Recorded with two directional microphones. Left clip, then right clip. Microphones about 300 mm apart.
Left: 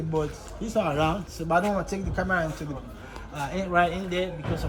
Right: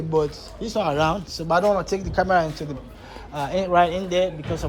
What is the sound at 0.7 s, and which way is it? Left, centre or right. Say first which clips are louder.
Speech: right 4 dB; centre.